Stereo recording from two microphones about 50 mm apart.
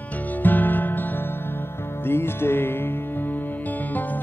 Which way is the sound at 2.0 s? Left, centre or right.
Left.